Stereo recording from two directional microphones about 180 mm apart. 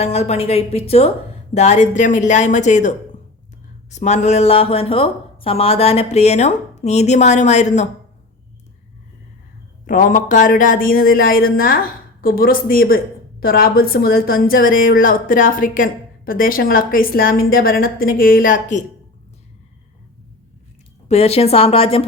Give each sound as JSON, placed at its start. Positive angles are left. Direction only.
{"t": 0.0, "sound": "a woman's voice", "side_deg": 35}
{"t": 9.8, "sound": "a woman's voice", "side_deg": 50}
{"t": 21.1, "sound": "speech", "side_deg": 35}